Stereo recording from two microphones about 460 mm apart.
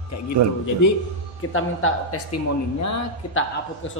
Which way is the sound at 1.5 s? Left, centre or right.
Left.